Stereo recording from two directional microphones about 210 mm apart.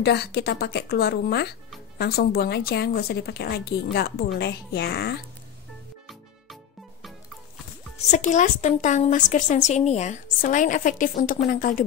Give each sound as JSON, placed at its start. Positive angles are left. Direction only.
{"t": 0.0, "sound": "a woman's voice", "side_deg": 50}
{"t": 8.0, "sound": "a woman's voice", "side_deg": 35}